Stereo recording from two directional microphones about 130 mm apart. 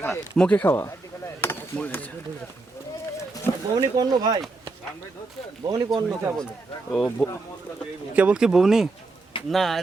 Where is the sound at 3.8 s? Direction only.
30° right (ahead or behind).